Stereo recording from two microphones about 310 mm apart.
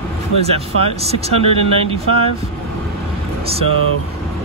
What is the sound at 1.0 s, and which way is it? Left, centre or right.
Speech, centre.